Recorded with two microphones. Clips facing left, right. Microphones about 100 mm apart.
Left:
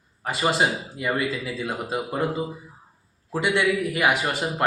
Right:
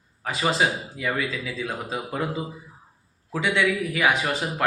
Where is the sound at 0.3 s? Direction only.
5° left (ahead or behind).